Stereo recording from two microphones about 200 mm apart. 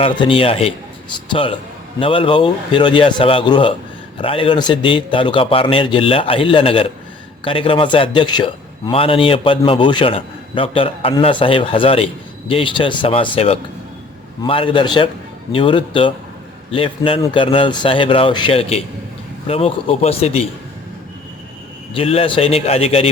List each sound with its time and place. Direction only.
0.0 s a man's voice: 25° left (ahead or behind)
21.9 s a man's voice: 30° left (ahead or behind)